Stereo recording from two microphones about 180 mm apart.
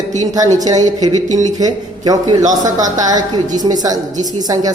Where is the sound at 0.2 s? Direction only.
20° right (ahead or behind).